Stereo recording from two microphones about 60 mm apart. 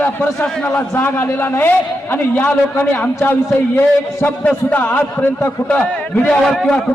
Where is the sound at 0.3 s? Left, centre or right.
Centre.